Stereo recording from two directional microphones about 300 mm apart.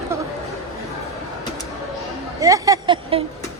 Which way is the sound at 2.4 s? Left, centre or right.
Centre.